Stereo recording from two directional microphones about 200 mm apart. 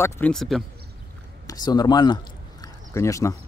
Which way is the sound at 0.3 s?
Centre (ahead or behind).